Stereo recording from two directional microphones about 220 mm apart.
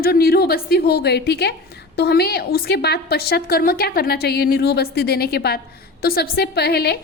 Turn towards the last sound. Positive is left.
turn(degrees=45)  # may be behind; listen again after turning